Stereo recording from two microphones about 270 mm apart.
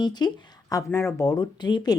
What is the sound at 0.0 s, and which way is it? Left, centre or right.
Speech, centre.